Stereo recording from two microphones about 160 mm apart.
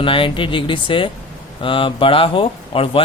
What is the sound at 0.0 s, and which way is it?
Speech, 35° left (ahead or behind).